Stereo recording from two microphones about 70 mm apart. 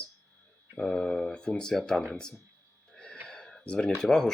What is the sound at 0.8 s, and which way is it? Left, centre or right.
Speech, centre.